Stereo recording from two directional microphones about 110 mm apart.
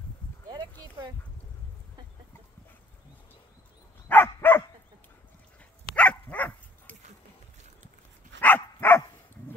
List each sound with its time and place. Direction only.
4.1 s dog: 20° left (ahead or behind)
5.9 s dog: 10° left (ahead or behind)
8.4 s dog: 15° left (ahead or behind)